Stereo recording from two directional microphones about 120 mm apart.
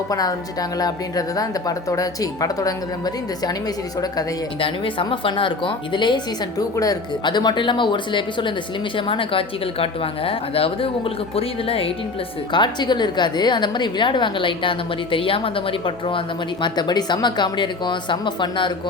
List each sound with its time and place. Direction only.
0.1 s a woman's voice: 30° left (ahead or behind)
4.6 s a woman's voice: 45° left (ahead or behind)
12.5 s a woman's voice: 40° left (ahead or behind)
16.6 s a woman's voice: 40° left (ahead or behind)